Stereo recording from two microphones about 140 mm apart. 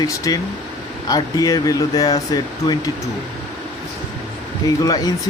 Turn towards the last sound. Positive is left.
turn(degrees=25)  # may be behind; listen again after turning